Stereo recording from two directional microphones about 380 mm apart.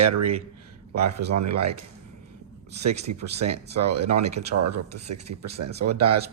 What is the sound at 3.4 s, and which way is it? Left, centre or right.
Speech, right.